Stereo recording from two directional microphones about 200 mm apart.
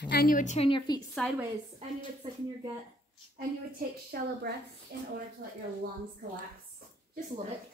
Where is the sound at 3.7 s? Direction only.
50° right (ahead or behind).